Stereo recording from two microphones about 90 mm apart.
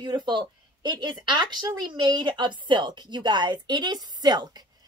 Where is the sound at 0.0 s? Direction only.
55° right (ahead or behind).